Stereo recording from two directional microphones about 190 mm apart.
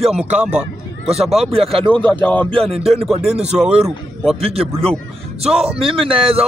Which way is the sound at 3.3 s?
35° right (ahead or behind).